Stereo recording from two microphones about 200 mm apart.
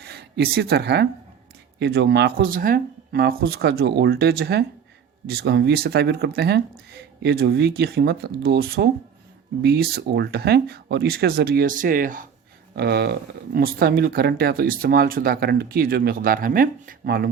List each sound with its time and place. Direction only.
0.0 s speech: 55° right (ahead or behind)
12.7 s speech: 55° right (ahead or behind)